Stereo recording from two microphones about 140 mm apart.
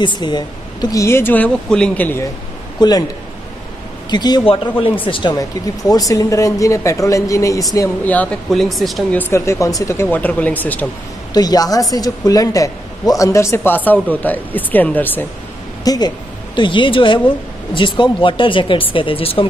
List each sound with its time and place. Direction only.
0.0 s speech: 35° left (ahead or behind); by 2.2 s 10° left (ahead or behind)
2.8 s speech: 30° left (ahead or behind)
4.1 s speech: 30° left (ahead or behind)
5.3 s speech: 25° left (ahead or behind)
8.0 s speech: 10° left (ahead or behind)
9.1 s speech: 15° left (ahead or behind)
11.3 s speech: 25° left (ahead or behind)
15.8 s speech: 25° left (ahead or behind)